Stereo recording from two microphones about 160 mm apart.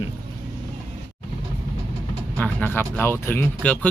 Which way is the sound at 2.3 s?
10° left (ahead or behind).